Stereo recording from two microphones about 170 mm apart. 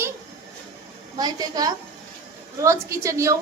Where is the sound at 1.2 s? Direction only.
25° right (ahead or behind).